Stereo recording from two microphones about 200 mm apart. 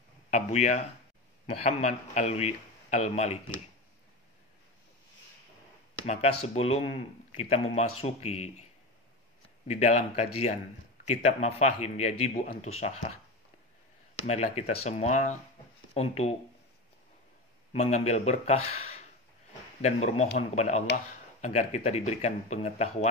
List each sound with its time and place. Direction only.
0.3 s speech: 35° left (ahead or behind)
6.0 s speech: 30° left (ahead or behind)
9.7 s speech: 35° left (ahead or behind)
14.2 s speech: 35° left (ahead or behind)
17.7 s speech: 35° left (ahead or behind)
18.7 s a sound: 30° left (ahead or behind)
19.8 s speech: 35° left (ahead or behind)